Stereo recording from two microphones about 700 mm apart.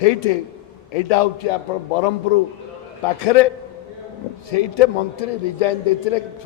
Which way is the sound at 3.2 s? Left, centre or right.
Left.